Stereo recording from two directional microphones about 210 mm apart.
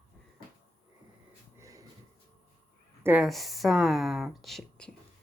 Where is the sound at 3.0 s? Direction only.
5° right (ahead or behind).